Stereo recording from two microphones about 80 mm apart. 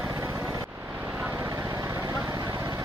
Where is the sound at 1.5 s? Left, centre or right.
Right.